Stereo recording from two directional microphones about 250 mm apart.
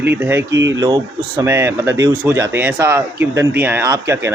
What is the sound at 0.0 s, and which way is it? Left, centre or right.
Speech, centre.